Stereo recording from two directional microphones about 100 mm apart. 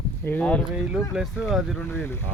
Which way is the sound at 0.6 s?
10° right (ahead or behind).